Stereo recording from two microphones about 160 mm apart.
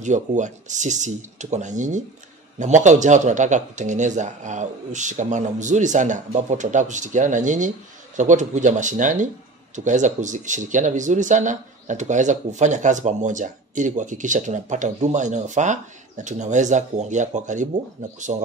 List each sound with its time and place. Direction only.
0.0 s speech: 50° right (ahead or behind)